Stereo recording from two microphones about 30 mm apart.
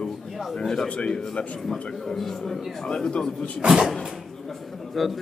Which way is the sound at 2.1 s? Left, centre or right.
Centre.